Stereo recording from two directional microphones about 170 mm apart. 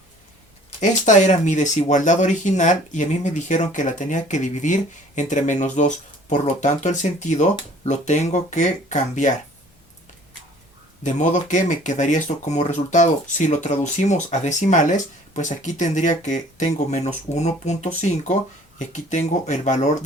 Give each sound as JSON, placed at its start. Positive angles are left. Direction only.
{"t": 0.8, "sound": "speech", "side_deg": 45}
{"t": 11.0, "sound": "speech", "side_deg": 45}